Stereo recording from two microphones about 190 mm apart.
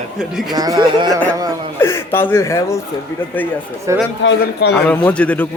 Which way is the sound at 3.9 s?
15° right (ahead or behind).